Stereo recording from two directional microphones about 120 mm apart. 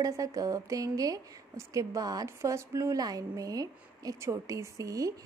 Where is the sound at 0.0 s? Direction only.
30° right (ahead or behind).